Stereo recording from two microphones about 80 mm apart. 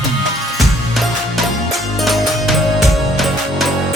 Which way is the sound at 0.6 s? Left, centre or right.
Centre.